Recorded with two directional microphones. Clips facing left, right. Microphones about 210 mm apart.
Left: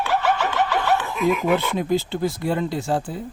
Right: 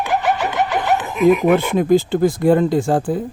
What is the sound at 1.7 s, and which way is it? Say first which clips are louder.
Speech: right 8 dB; 50° right (ahead or behind).